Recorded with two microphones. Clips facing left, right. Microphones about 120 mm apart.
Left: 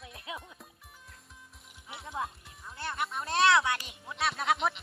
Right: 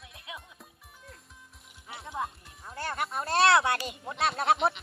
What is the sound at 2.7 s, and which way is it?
Speech, 40° right (ahead or behind).